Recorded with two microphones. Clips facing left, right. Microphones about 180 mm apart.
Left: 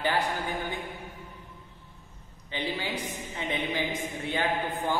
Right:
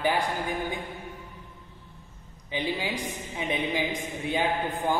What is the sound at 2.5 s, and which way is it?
Speech, 10° right (ahead or behind).